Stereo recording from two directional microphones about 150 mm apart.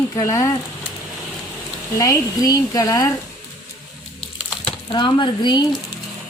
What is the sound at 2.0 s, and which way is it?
Speech, 20° left (ahead or behind).